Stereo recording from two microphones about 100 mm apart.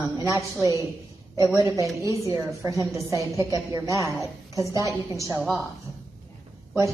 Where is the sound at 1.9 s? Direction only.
30° right (ahead or behind).